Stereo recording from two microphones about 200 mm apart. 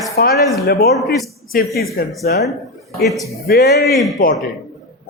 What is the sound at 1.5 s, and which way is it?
Speech, 45° left (ahead or behind).